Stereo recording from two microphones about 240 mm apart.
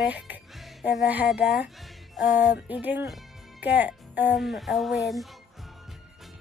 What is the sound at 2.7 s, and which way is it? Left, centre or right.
Speech, centre.